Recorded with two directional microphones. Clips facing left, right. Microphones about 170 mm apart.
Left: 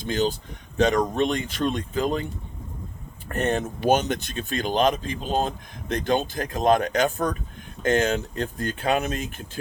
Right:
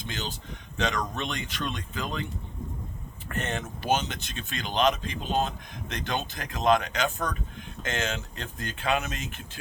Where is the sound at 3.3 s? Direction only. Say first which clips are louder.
Left 8 dB; 40° left (ahead or behind).